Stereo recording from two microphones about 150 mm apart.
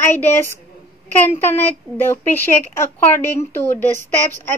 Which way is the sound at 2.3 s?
15° left (ahead or behind).